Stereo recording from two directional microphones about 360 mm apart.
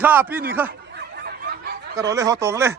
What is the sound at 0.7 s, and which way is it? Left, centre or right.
Fowl, right.